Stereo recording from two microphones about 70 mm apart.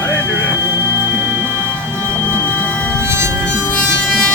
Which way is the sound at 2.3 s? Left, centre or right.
Left.